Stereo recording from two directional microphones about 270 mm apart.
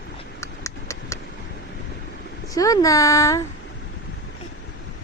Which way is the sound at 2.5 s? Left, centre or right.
Centre.